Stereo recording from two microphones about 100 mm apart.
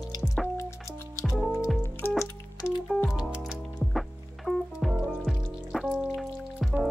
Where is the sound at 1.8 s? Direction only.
25° left (ahead or behind).